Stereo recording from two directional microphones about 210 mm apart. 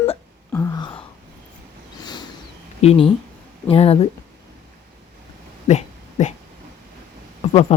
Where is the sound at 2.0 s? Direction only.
20° left (ahead or behind).